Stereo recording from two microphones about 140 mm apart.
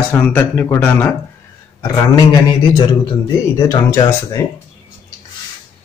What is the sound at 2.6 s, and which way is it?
Speech, 40° left (ahead or behind).